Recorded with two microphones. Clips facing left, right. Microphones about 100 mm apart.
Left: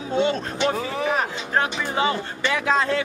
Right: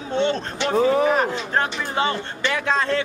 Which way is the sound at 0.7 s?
35° right (ahead or behind).